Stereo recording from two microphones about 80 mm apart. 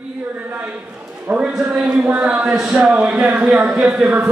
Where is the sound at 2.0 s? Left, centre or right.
Centre.